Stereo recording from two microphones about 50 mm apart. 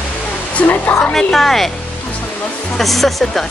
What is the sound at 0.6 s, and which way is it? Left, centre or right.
Speech, left.